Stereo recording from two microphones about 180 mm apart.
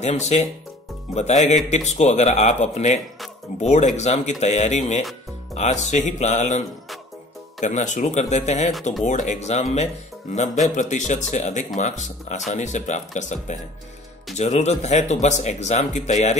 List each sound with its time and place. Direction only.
0.0 s a man's voice: 35° left (ahead or behind)
7.6 s a man's voice: 40° left (ahead or behind)